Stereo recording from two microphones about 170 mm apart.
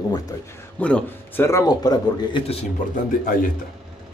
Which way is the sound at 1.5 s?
20° left (ahead or behind).